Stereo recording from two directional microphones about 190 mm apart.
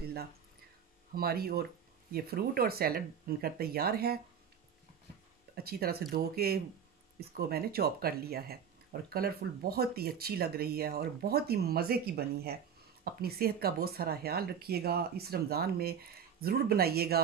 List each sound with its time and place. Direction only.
1.1 s speech: 55° right (ahead or behind)
5.6 s speech: 55° right (ahead or behind)